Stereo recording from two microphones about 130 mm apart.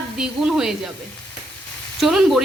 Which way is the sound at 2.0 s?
Centre (ahead or behind).